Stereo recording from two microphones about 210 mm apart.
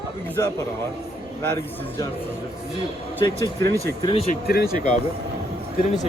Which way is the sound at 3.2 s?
15° left (ahead or behind).